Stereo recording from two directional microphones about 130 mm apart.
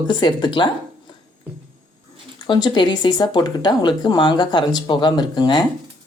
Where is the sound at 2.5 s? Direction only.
35° left (ahead or behind).